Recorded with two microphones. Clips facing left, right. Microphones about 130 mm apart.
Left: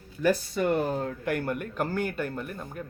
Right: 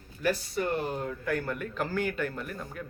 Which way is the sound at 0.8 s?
45° left (ahead or behind).